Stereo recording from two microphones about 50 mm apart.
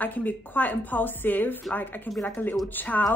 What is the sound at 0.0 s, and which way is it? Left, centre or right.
A woman's voice, left.